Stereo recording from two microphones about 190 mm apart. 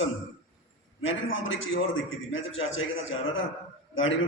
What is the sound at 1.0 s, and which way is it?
A man's voice, 90° left.